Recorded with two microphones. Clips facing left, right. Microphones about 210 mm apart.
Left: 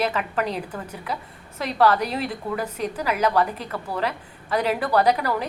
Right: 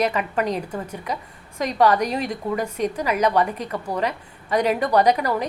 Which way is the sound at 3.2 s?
15° right (ahead or behind).